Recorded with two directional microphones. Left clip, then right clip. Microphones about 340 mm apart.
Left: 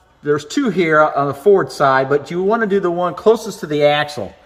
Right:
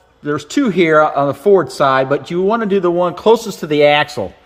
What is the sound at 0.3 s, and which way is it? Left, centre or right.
Speech, centre.